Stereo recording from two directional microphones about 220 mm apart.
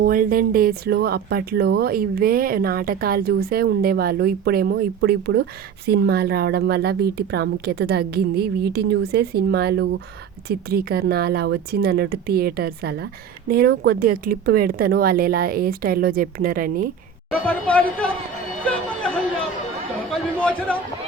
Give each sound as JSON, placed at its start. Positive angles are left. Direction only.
{"t": 0.0, "sound": "speech", "side_deg": -40}
{"t": 17.4, "sound": "a woman's voice", "side_deg": 5}
{"t": 20.4, "sound": "a sound", "side_deg": 5}